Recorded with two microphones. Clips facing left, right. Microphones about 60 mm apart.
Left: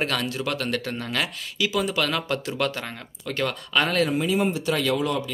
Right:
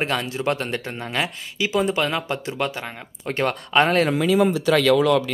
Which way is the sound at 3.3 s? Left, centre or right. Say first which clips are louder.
Right 4 dB; right.